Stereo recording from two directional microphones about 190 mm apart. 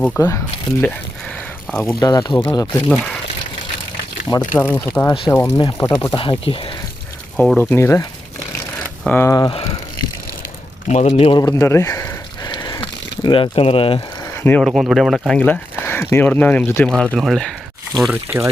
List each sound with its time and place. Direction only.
0.2 s speech: 15° left (ahead or behind)
1.6 s a sound: 5° left (ahead or behind)
1.9 s speech: 20° left (ahead or behind)
2.9 s speech: centre (ahead or behind)
4.5 s speech: 10° left (ahead or behind); by 6.7 s 30° left (ahead or behind)
7.3 s speech: centre (ahead or behind)
7.7 s speech: 15° left (ahead or behind)
9.0 s speech: 10° left (ahead or behind); by 9.7 s 30° left (ahead or behind)
10.8 s speech: 40° left (ahead or behind)
11.3 s a sound: 20° left (ahead or behind)
14.4 s speech: 5° left (ahead or behind)
15.8 s a sound: 10° left (ahead or behind)
16.1 s speech: 10° left (ahead or behind)